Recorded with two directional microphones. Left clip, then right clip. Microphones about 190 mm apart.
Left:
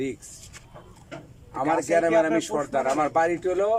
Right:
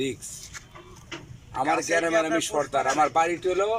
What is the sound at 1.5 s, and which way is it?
A man's voice, centre (ahead or behind).